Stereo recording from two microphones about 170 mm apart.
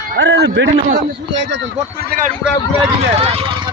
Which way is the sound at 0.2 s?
90° right.